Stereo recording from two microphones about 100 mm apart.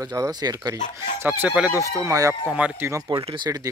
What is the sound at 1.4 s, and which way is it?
Speech, 10° right (ahead or behind).